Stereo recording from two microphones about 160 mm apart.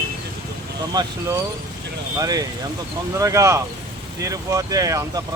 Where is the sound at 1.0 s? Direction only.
25° right (ahead or behind).